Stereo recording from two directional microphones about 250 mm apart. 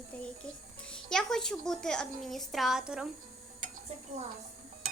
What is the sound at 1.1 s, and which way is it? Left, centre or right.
A woman's voice, centre.